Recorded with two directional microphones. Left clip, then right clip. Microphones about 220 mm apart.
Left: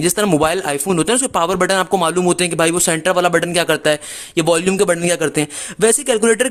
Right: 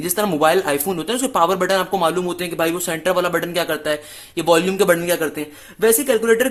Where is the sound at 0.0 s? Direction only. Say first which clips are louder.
Left 2 dB; 35° left (ahead or behind).